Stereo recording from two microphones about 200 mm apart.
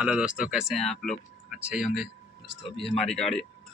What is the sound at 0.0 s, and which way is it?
Speech, 5° right (ahead or behind).